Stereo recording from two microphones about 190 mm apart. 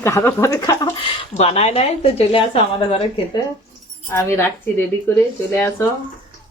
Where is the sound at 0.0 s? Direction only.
15° left (ahead or behind).